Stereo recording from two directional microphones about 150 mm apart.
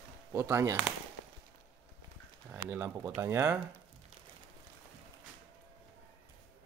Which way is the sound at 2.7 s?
10° right (ahead or behind).